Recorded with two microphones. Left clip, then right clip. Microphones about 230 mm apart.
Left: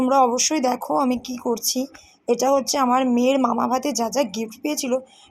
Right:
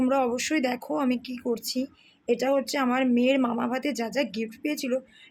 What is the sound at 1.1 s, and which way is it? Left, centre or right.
Speech, right.